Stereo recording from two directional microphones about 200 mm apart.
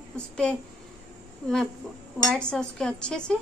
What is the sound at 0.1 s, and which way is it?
Speech, 5° left (ahead or behind).